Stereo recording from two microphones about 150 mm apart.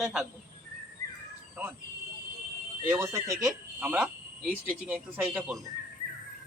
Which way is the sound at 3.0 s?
20° right (ahead or behind).